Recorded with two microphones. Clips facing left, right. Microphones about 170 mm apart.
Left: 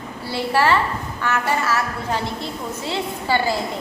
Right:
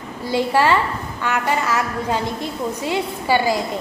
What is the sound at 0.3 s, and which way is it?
A woman's voice, 15° right (ahead or behind).